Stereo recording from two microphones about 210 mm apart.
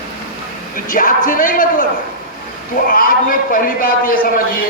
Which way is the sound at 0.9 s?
40° left (ahead or behind).